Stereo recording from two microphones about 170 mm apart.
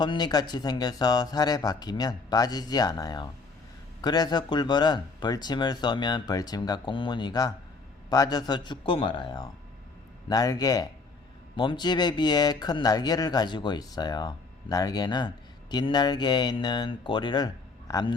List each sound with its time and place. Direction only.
0.0 s speech: 25° left (ahead or behind)